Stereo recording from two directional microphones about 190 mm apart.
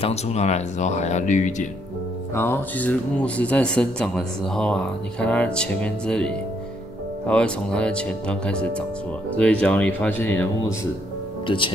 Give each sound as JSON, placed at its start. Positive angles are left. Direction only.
{"t": 0.0, "sound": "speech", "side_deg": 35}
{"t": 2.3, "sound": "speech", "side_deg": 10}
{"t": 11.4, "sound": "speech", "side_deg": 25}